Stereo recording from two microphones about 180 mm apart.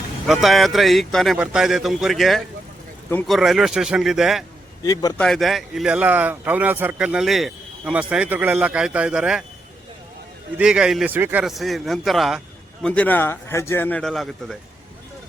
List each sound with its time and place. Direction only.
0.4 s a man's voice: centre (ahead or behind)
4.8 s a man's voice: 20° left (ahead or behind)
5.1 s speech: 5° left (ahead or behind)
10.6 s a man's voice: 5° right (ahead or behind)